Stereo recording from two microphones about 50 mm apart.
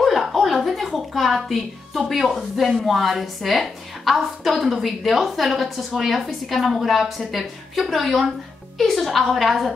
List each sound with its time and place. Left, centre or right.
0.0 s a woman's voice: centre